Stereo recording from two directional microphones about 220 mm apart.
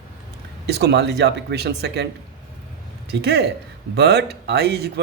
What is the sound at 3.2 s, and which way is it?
Speech, 50° right (ahead or behind).